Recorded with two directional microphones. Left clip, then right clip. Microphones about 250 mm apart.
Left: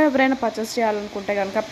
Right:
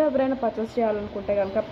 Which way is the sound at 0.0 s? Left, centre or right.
Left.